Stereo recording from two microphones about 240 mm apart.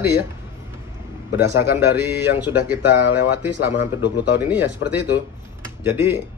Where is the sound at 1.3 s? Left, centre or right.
Centre.